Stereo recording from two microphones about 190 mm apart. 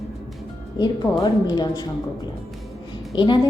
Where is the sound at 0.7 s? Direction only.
20° left (ahead or behind).